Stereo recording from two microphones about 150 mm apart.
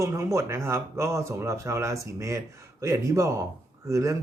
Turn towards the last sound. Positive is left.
turn(degrees=-20)  # may be behind; listen again after turning